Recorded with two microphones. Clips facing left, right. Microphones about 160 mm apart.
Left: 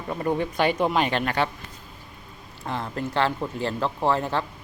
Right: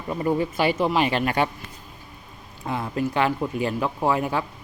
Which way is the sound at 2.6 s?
10° right (ahead or behind).